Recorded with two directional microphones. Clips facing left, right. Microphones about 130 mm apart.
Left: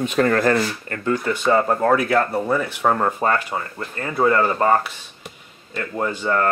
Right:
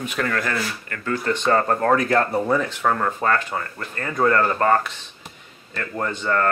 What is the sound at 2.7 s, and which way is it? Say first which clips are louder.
Speech: left 2 dB; 15° left (ahead or behind).